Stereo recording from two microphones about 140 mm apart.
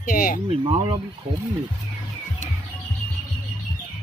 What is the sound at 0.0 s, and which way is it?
Speech, 80° left.